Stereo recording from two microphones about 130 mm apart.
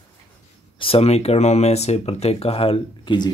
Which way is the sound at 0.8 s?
50° left (ahead or behind).